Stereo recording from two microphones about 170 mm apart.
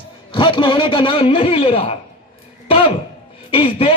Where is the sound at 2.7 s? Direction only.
30° left (ahead or behind).